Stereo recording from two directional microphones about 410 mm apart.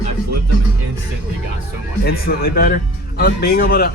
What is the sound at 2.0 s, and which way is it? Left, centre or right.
Speech, left.